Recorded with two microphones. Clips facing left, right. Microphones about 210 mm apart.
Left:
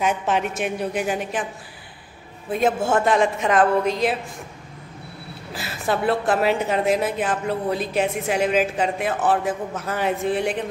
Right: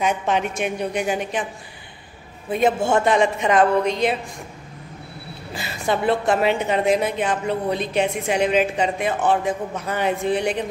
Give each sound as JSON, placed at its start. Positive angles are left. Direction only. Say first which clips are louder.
{"t": 0.0, "sound": "a woman's voice", "louder": "right 1 dB", "side_deg": 5}
{"t": 2.5, "sound": "a woman's voice", "louder": "right 1 dB", "side_deg": 0}
{"t": 5.5, "sound": "a woman's voice", "louder": "right 1 dB", "side_deg": 0}